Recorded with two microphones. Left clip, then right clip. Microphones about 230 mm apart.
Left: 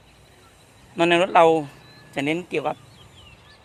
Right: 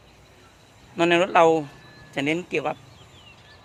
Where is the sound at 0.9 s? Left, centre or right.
Left.